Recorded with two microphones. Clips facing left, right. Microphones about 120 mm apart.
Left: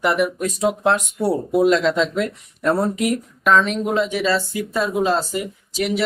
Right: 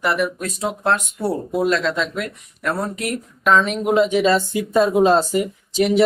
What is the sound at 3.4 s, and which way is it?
Speech, 5° right (ahead or behind).